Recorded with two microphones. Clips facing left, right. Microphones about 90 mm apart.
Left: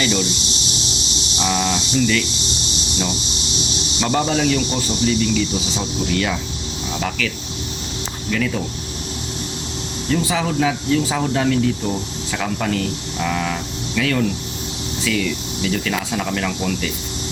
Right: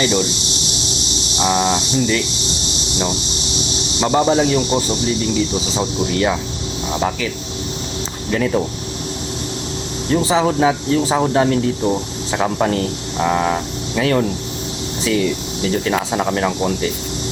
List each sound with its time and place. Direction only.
1.4 s speech: 25° right (ahead or behind)
4.0 s speech: 20° right (ahead or behind)
8.3 s speech: 30° right (ahead or behind)
10.1 s speech: 30° right (ahead or behind)